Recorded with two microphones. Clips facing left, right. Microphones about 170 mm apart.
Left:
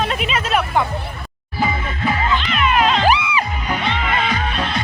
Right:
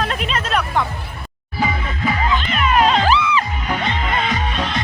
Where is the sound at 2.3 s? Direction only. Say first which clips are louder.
Even; 45° right (ahead or behind).